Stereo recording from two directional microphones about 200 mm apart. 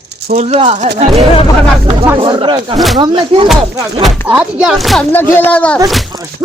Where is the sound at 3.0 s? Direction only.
25° right (ahead or behind).